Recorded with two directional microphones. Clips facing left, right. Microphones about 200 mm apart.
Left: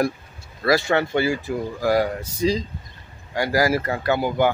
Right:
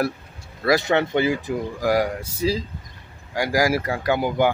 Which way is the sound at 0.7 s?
20° right (ahead or behind).